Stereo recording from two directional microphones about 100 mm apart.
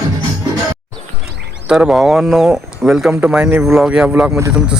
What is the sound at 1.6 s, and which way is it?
Speech, 5° right (ahead or behind).